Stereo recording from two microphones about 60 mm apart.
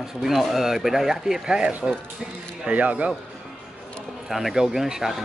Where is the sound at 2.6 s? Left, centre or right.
Right.